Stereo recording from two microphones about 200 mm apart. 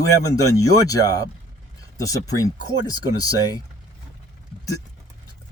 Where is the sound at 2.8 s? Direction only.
20° left (ahead or behind).